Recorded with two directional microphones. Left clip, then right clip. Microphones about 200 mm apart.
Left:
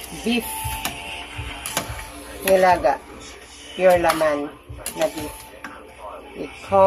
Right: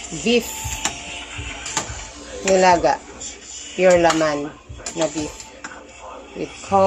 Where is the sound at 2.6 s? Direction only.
25° right (ahead or behind).